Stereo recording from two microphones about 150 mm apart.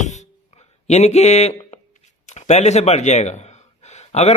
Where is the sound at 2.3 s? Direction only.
50° left (ahead or behind).